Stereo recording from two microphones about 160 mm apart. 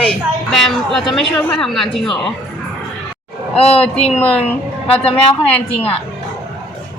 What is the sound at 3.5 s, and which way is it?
Speech, 40° left (ahead or behind).